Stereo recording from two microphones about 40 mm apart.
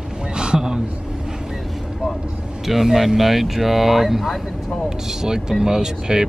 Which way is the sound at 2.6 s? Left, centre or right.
Centre.